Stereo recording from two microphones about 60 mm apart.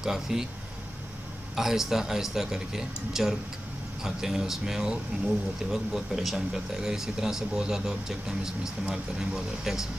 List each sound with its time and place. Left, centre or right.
0.0 s speech: centre
1.5 s speech: centre
5.1 s speech: centre
5.7 s speech: centre